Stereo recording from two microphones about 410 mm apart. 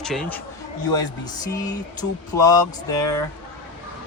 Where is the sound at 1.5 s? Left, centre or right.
Centre.